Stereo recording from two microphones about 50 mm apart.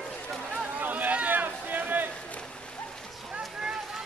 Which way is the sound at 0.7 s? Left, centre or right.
Right.